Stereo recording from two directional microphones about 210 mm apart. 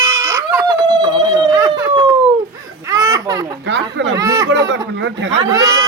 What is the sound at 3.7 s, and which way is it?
Speech, 60° right (ahead or behind).